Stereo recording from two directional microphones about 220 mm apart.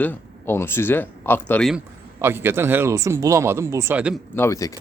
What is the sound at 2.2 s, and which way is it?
Speech, 10° right (ahead or behind).